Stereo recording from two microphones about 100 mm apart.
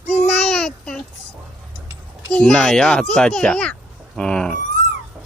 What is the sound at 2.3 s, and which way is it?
A child's voice, 5° left (ahead or behind).